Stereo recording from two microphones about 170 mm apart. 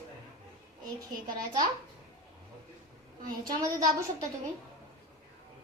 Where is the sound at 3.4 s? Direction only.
20° right (ahead or behind).